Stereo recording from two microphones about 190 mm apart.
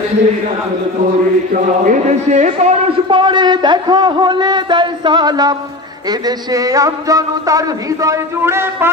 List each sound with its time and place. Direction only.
1.5 s a man's voice: 40° right (ahead or behind); by 8.9 s 15° right (ahead or behind)